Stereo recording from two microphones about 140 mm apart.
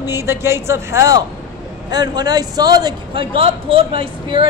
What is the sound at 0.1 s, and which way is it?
A man's voice, 20° right (ahead or behind).